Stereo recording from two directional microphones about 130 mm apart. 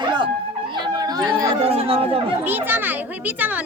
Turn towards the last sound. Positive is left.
turn(degrees=-15)  # may be behind; listen again after turning